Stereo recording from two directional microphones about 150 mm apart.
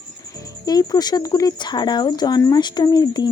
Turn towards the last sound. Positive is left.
turn(degrees=30)  # may be behind; listen again after turning